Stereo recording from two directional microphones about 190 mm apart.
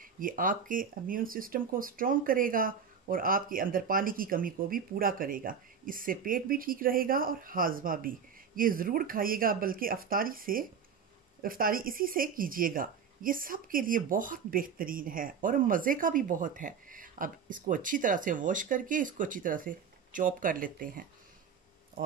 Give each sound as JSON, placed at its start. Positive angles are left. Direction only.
{"t": 0.0, "sound": "speech", "side_deg": -45}